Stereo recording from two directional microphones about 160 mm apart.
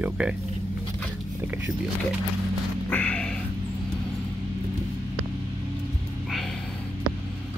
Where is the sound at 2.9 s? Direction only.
10° left (ahead or behind).